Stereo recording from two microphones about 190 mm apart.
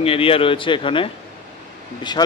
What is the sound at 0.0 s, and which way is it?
Speech, 30° left (ahead or behind).